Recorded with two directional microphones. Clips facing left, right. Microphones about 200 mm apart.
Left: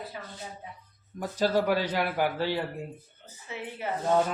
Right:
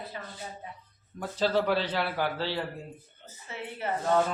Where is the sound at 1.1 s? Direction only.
10° left (ahead or behind).